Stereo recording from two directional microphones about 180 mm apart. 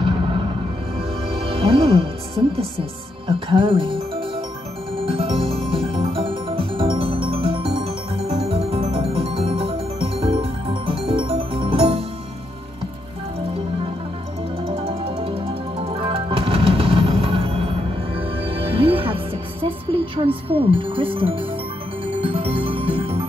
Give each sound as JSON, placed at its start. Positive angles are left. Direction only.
{"t": 0.0, "sound": "music", "side_deg": -30}
{"t": 2.4, "sound": "speech", "side_deg": -25}
{"t": 5.0, "sound": "music", "side_deg": -30}
{"t": 14.7, "sound": "music", "side_deg": -35}